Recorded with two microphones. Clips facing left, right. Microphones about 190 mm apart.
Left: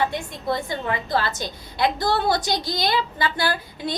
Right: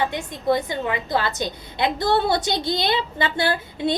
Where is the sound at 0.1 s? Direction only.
20° right (ahead or behind).